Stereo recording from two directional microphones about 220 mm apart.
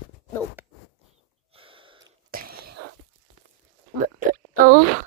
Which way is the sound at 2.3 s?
45° right (ahead or behind).